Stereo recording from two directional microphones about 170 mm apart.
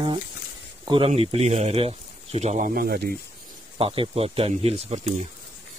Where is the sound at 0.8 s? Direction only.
30° right (ahead or behind); by 3.2 s 60° right (ahead or behind).